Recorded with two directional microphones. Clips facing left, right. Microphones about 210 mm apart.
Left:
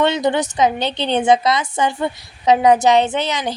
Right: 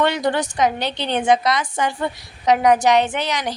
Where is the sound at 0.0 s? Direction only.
20° left (ahead or behind).